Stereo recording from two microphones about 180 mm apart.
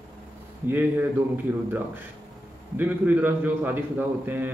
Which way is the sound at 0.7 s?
10° right (ahead or behind).